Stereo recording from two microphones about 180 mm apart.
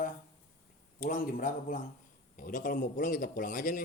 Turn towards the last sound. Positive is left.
turn(degrees=50)  # may be behind; listen again after turning